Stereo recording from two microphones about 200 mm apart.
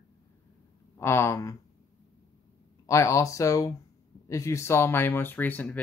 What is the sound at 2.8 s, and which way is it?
Speech, 15° left (ahead or behind).